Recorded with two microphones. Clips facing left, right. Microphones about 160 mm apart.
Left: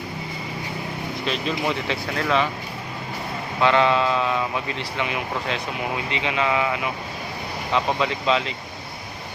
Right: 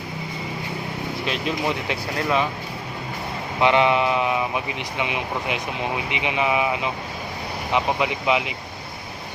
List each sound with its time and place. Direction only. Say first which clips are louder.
1.3 s speech: even; 10° right (ahead or behind)
3.6 s speech: right 1 dB; 20° right (ahead or behind)